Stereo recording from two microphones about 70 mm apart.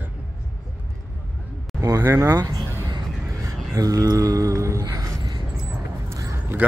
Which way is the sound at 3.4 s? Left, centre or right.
Right.